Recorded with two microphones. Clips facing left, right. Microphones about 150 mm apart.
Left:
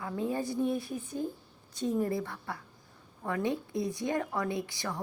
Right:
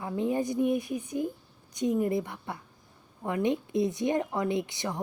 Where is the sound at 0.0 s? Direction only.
20° right (ahead or behind).